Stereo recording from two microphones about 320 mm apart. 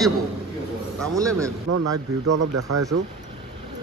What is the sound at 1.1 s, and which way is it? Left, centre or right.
Speech, centre.